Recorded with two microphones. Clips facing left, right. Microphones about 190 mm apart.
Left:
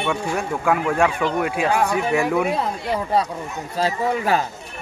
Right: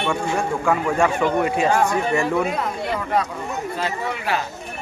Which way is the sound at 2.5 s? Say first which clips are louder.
Left 1 dB; 30° left (ahead or behind).